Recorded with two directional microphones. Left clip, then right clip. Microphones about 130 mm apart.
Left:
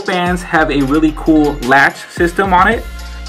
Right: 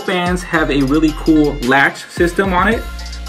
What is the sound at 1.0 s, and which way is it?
Speech, 15° left (ahead or behind).